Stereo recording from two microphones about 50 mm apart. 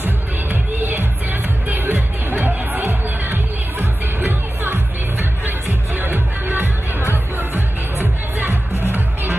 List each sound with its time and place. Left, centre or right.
0.0 s music: right
5.9 s music: right